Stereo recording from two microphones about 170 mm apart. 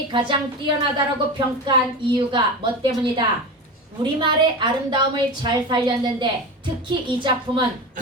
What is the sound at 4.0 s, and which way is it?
A woman's voice, 30° right (ahead or behind).